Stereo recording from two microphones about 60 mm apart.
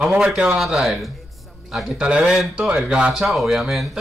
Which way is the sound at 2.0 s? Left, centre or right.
Centre.